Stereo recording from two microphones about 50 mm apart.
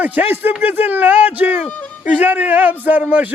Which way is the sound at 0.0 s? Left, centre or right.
Right.